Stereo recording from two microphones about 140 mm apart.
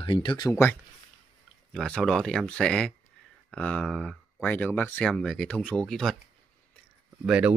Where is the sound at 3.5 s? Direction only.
10° left (ahead or behind).